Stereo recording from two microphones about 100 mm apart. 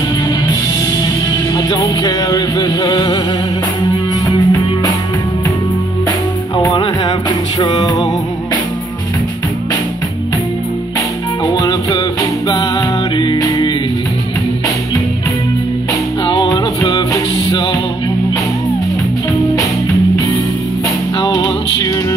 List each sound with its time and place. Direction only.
1.0 s music: 45° left (ahead or behind)
4.3 s music: 40° left (ahead or behind)
6.5 s music: 45° left (ahead or behind)
11.4 s music: 35° left (ahead or behind)
16.3 s music: 45° left (ahead or behind)
21.2 s music: 45° left (ahead or behind)